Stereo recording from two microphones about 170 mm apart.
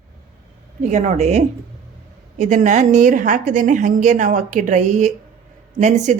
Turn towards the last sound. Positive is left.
turn(degrees=-45)  # may be behind; listen again after turning